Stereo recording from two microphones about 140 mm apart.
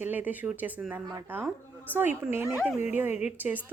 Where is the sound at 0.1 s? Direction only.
10° right (ahead or behind).